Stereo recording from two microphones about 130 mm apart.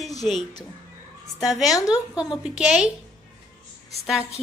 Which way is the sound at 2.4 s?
5° right (ahead or behind).